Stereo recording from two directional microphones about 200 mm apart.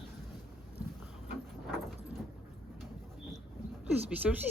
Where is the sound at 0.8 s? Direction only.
5° right (ahead or behind).